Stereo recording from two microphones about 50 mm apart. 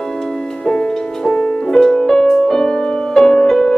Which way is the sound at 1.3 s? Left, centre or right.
Centre.